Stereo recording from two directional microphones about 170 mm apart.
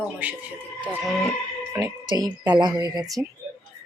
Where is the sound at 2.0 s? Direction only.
25° right (ahead or behind).